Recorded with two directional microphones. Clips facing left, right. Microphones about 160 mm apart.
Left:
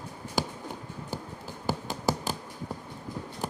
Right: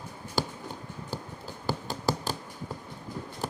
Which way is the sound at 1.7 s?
20° left (ahead or behind).